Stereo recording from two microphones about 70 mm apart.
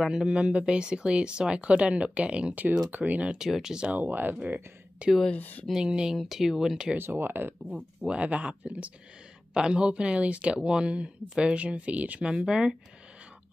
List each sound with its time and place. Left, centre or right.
0.0 s speech: centre
3.4 s speech: centre
4.0 s speech: right
5.3 s speech: left
5.7 s speech: centre
7.0 s speech: right
8.0 s speech: centre